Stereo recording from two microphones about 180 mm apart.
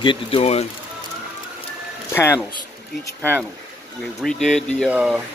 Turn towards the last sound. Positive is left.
turn(degrees=-5)  # may be behind; listen again after turning